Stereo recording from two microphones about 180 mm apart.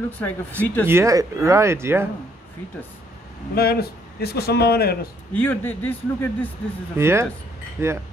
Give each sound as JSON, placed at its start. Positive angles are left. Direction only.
{"t": 0.2, "sound": "a man's voice", "side_deg": 10}
{"t": 0.8, "sound": "speech", "side_deg": -15}
{"t": 3.5, "sound": "speech", "side_deg": 60}
{"t": 5.3, "sound": "a man's voice", "side_deg": 10}
{"t": 7.0, "sound": "speech", "side_deg": -15}